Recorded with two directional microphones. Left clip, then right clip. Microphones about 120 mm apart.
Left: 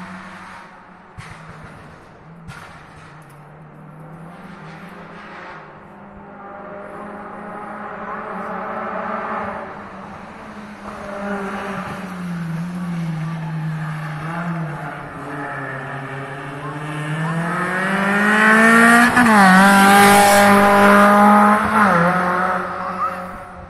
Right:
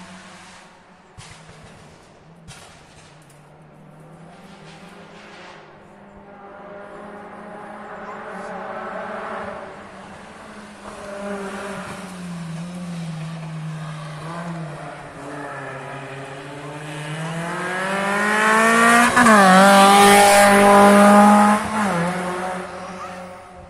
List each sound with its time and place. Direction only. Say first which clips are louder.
8.4 s a sound: left 3 dB; 25° right (ahead or behind)
10.9 s vehicle: left 3 dB; centre (ahead or behind)
13.8 s vehicle: left 5 dB; 10° right (ahead or behind)
15.4 s vehicle: left 5 dB; 15° right (ahead or behind)
17.3 s vehicle: left 4 dB; 30° right (ahead or behind)
19.6 s vehicle: even; centre (ahead or behind)
21.6 s vehicle: left 8 dB; 15° right (ahead or behind)